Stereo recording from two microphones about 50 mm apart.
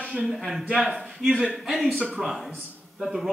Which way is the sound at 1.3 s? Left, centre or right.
Centre.